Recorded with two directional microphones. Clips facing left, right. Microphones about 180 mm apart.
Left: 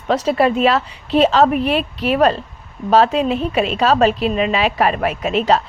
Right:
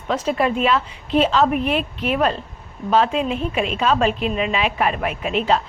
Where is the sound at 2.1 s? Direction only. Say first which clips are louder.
Left 6 dB; 40° left (ahead or behind).